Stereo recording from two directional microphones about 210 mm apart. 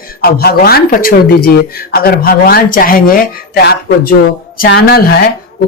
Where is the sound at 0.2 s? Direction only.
45° left (ahead or behind).